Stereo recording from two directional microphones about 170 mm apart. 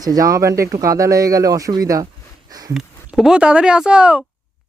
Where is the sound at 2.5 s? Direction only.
20° right (ahead or behind).